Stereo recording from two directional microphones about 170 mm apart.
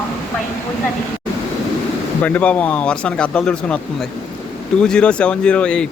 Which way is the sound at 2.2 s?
10° left (ahead or behind).